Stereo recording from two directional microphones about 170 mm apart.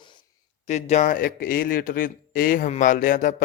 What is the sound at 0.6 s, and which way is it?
A man's voice, 40° left (ahead or behind).